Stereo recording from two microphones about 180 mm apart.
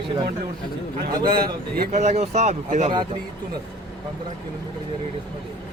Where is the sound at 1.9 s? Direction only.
40° right (ahead or behind).